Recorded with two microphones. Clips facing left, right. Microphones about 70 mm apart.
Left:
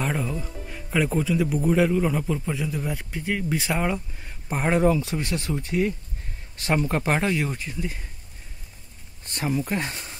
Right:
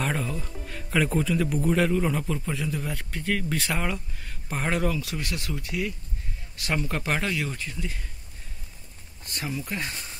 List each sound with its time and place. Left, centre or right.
0.0 s speech: centre; by 8.1 s left
9.2 s speech: left